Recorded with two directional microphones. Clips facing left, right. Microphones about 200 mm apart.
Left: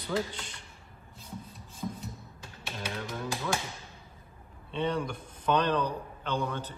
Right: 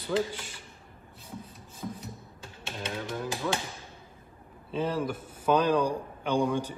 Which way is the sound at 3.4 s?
5° right (ahead or behind).